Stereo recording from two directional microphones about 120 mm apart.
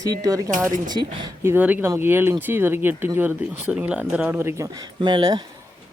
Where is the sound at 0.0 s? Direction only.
30° right (ahead or behind).